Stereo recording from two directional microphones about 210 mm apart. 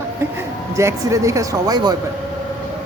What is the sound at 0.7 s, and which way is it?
Speech, 15° right (ahead or behind).